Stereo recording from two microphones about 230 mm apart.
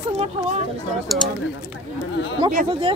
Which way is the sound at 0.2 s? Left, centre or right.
Right.